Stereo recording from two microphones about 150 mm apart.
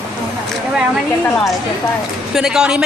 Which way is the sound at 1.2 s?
5° left (ahead or behind).